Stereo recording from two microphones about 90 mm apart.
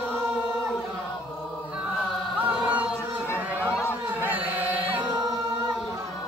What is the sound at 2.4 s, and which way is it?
Chant, 15° right (ahead or behind).